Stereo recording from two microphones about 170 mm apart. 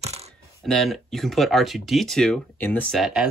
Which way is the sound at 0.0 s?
40° right (ahead or behind).